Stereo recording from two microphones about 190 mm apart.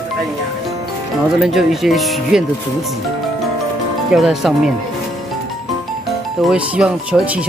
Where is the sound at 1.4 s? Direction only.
Centre (ahead or behind).